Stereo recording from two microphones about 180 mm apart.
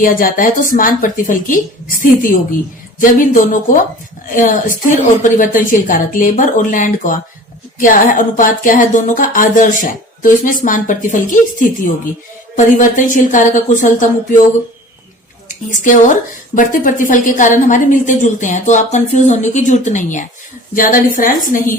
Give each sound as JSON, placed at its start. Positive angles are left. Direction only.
{"t": 0.0, "sound": "speech", "side_deg": 50}
{"t": 15.4, "sound": "a woman's voice", "side_deg": 45}